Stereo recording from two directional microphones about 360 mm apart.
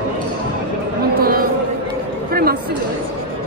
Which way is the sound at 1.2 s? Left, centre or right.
Right.